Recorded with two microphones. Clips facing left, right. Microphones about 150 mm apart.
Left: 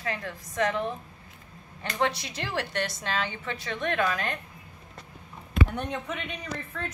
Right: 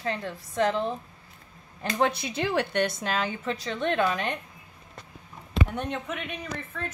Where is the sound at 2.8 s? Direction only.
50° right (ahead or behind).